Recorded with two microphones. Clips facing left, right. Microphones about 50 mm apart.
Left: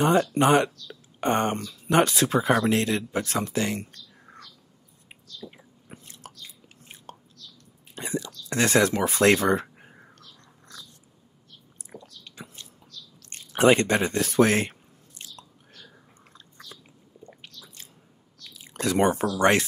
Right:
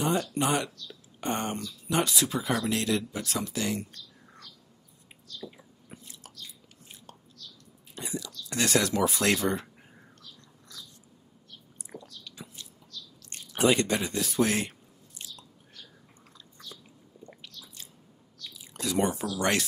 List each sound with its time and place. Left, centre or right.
0.0 s speech: left
5.9 s chewing: left
7.9 s whispering: left
8.5 s speech: left
9.5 s a sound: left
12.3 s a sound: left
13.5 s speech: left
18.6 s speech: left
19.3 s speech: left